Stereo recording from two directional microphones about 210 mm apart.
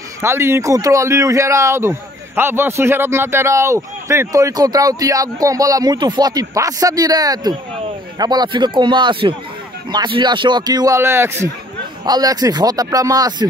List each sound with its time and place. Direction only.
0.2 s a man's voice: 10° right (ahead or behind)